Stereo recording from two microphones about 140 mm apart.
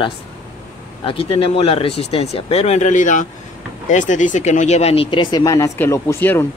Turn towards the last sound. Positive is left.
turn(degrees=15)  # may be behind; listen again after turning